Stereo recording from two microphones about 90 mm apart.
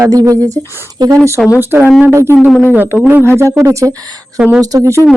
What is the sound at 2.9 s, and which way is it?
Speech, 20° right (ahead or behind).